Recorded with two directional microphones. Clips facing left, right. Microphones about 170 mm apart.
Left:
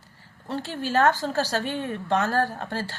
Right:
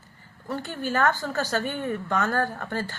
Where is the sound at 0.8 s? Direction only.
90° left.